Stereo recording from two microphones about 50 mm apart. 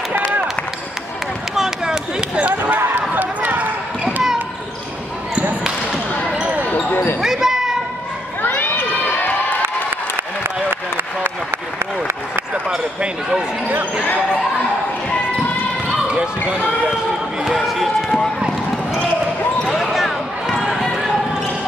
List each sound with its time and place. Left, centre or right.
1.5 s a sound: centre
2.4 s a sound: right
3.2 s run: right
7.2 s basketball bounce: centre
8.5 s crowd: left
10.4 s a sound: right
12.6 s speech: centre
17.6 s basketball bounce: centre
19.7 s basketball bounce: centre